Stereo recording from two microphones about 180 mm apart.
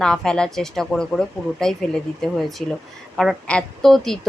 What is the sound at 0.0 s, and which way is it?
Speech, 5° left (ahead or behind).